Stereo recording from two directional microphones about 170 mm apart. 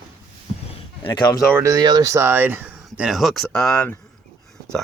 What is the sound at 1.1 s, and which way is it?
Speech, 25° left (ahead or behind).